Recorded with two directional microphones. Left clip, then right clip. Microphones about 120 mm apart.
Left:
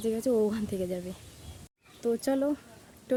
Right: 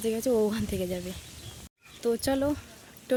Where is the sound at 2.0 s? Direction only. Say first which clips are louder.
Right 1 dB; 20° left (ahead or behind).